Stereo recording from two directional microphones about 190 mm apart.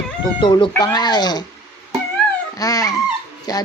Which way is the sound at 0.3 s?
25° left (ahead or behind).